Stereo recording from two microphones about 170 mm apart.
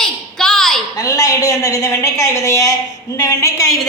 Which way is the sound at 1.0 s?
20° left (ahead or behind).